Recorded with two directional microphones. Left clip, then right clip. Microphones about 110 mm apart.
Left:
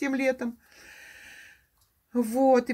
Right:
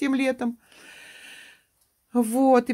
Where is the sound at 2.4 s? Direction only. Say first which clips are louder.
Right 2 dB; 90° right.